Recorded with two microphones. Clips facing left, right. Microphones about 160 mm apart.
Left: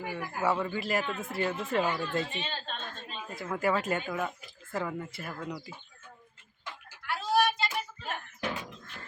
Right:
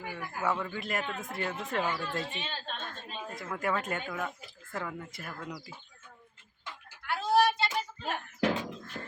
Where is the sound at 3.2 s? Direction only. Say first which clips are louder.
Left 4 dB; 5° left (ahead or behind).